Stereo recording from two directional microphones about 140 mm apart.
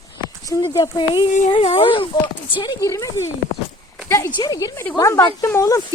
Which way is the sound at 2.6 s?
25° left (ahead or behind).